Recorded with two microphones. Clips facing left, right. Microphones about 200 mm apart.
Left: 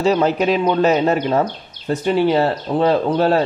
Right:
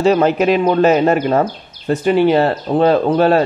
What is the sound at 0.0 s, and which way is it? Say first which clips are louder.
Speech: right 3 dB; 55° right (ahead or behind).